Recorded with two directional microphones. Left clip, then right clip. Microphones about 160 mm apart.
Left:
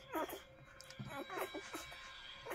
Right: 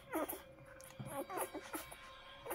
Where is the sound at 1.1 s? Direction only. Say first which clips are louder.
Right 1 dB; 20° right (ahead or behind).